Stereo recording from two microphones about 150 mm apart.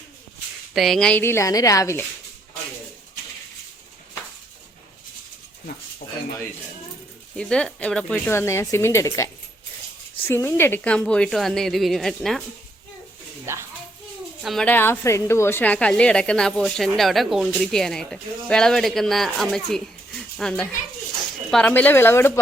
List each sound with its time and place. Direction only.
0.7 s a woman's voice: centre (ahead or behind); by 2.0 s 20° left (ahead or behind)
7.3 s a woman's voice: 5° left (ahead or behind)
8.3 s a woman's voice: 15° left (ahead or behind)
13.4 s a child's voice: 15° right (ahead or behind)
14.4 s a woman's voice: centre (ahead or behind)
14.7 s a woman's voice: 15° left (ahead or behind)